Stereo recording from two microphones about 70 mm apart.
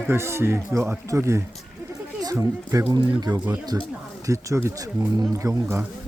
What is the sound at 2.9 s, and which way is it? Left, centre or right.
Speech, right.